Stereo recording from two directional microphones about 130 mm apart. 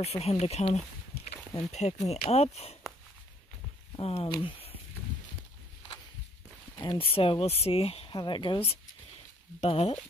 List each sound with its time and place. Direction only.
0.0 s speech: 55° left (ahead or behind)
3.9 s speech: 45° left (ahead or behind)
4.4 s a sound: 45° left (ahead or behind)
6.8 s speech: 40° left (ahead or behind)
9.6 s speech: 55° left (ahead or behind)